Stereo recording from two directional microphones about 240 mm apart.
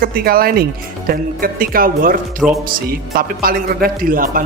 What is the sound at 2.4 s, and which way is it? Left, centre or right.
Speech, centre.